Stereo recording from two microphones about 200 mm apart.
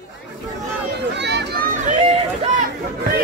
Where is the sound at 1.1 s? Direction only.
60° right (ahead or behind).